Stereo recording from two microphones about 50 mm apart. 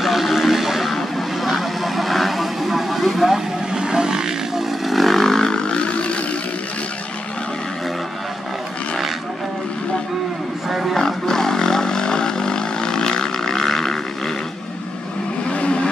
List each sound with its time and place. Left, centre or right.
0.0 s a sound: centre
0.9 s vehicle: centre; by 6.1 s left
10.7 s roaring cats: centre
11.0 s roaring cats: centre
15.5 s vehicle: left